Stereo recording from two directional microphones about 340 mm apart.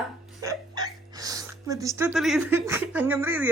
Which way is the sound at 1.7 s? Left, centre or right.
Centre.